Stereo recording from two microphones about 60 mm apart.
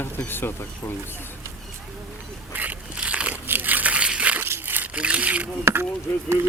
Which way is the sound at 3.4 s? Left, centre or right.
Right.